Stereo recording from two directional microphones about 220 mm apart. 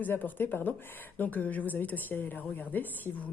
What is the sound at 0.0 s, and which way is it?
A woman's voice, 10° left (ahead or behind).